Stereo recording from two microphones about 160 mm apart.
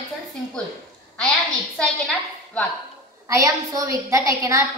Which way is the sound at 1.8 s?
5° left (ahead or behind).